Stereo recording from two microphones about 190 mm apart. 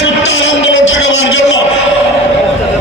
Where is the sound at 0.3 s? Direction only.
75° left (ahead or behind).